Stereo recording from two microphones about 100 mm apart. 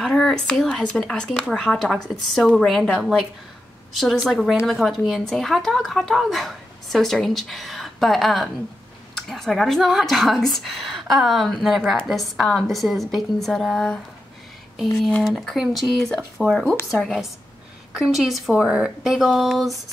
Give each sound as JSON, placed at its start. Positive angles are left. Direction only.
{"t": 0.0, "sound": "speech", "side_deg": 0}